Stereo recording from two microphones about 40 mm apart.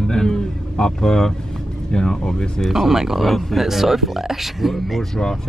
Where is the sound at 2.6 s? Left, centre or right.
Centre.